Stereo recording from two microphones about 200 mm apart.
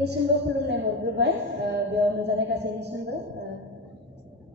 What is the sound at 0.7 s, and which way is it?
A woman's voice, 60° right (ahead or behind).